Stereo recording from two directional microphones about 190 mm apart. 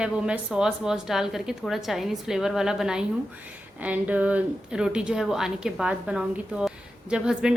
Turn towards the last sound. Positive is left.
turn(degrees=-5)  # may be behind; listen again after turning